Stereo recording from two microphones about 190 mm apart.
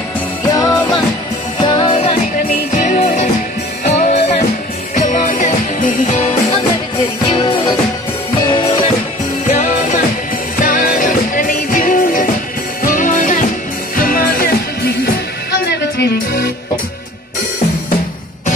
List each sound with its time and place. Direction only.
0.5 s music: 20° left (ahead or behind)
2.7 s music: 40° left (ahead or behind)
7.2 s music: 20° left (ahead or behind)
9.5 s music: 40° left (ahead or behind); by 16.4 s 60° left (ahead or behind)